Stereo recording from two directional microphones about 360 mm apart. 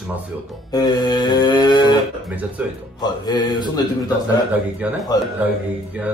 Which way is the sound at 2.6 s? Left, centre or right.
Centre.